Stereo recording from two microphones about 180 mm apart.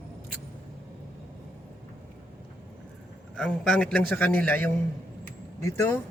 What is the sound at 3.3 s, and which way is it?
A man's voice, 5° left (ahead or behind).